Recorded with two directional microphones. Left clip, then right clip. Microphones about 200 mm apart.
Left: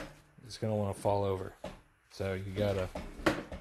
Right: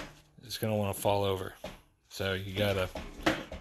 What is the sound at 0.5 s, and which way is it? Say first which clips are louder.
Speech: right 2 dB; centre (ahead or behind).